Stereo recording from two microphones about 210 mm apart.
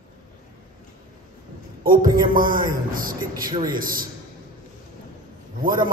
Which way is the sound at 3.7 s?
40° right (ahead or behind).